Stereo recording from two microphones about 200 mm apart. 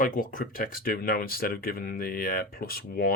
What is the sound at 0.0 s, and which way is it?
Speech, 40° left (ahead or behind).